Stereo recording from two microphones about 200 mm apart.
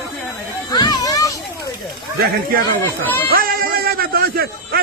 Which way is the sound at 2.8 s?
10° left (ahead or behind).